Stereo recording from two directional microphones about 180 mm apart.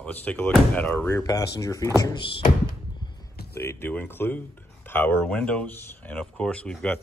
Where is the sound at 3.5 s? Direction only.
15° left (ahead or behind).